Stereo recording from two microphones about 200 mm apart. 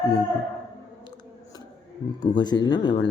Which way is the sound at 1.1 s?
20° left (ahead or behind).